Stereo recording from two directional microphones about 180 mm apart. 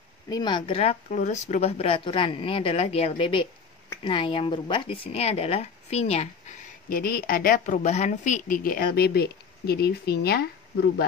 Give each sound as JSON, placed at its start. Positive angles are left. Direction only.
{"t": 0.3, "sound": "speech", "side_deg": 25}
{"t": 6.9, "sound": "a woman's voice", "side_deg": 55}